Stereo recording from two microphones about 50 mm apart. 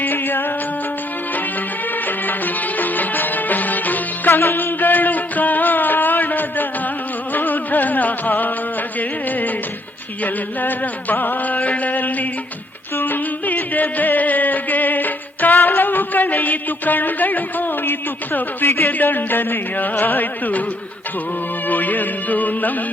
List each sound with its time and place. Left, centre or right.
0.0 s music: left
2.0 s music: left
21.7 s music: left